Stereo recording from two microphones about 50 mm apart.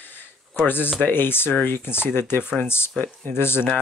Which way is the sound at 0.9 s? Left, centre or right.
Left.